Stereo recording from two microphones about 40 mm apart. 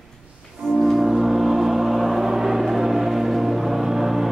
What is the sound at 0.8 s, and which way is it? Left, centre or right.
Music, centre.